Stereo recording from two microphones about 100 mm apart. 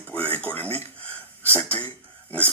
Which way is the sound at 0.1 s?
15° left (ahead or behind).